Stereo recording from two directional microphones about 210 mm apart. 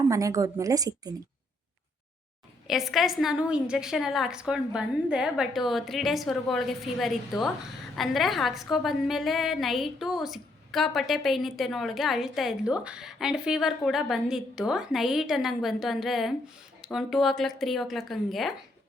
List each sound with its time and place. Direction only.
0.1 s speech: 15° right (ahead or behind)
2.6 s a woman's voice: centre (ahead or behind)